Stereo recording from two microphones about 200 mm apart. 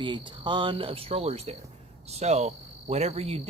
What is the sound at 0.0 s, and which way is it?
Speech, 25° right (ahead or behind).